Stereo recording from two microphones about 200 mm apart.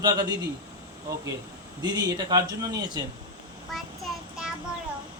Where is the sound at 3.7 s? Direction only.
Centre (ahead or behind).